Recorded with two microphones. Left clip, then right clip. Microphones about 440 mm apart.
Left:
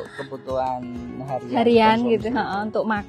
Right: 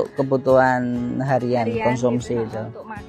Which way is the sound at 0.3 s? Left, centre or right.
Right.